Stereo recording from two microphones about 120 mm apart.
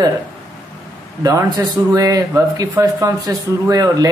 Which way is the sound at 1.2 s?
30° right (ahead or behind).